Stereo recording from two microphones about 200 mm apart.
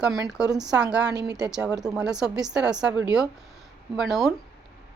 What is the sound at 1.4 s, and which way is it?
A woman's voice, 5° right (ahead or behind).